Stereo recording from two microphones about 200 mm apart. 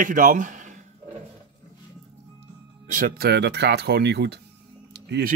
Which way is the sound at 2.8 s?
45° right (ahead or behind).